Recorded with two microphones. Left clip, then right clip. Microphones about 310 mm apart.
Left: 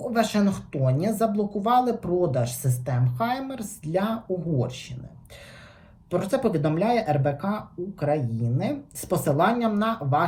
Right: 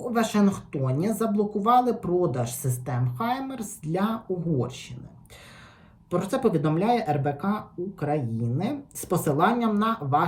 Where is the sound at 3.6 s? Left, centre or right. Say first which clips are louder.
Left 3 dB; right.